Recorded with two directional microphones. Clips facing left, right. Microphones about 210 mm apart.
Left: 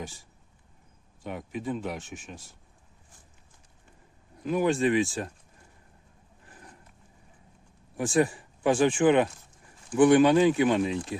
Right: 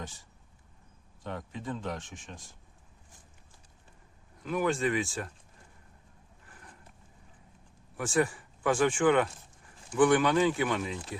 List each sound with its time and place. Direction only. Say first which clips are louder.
0.0 s speech: left 4 dB; 10° left (ahead or behind)
4.4 s speech: left 5 dB; 20° left (ahead or behind)
7.9 s speech: left 4 dB; 20° left (ahead or behind)